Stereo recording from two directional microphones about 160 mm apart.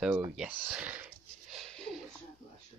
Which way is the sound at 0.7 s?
10° right (ahead or behind).